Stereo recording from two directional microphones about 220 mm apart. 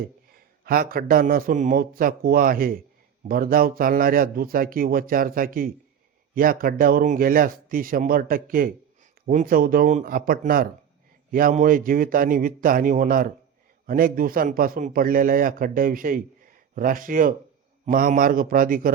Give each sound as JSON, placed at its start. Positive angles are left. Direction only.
{"t": 0.0, "sound": "a man's voice", "side_deg": -40}